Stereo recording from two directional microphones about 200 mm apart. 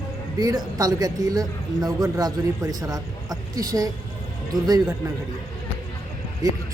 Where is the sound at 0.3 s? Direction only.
20° right (ahead or behind).